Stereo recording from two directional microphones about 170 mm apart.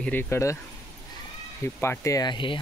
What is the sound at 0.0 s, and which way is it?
Speech, 10° left (ahead or behind).